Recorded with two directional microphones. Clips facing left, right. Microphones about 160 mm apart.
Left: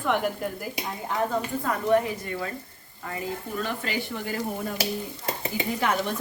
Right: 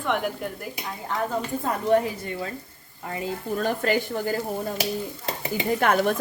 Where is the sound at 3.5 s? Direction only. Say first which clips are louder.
Right 8 dB; 45° right (ahead or behind).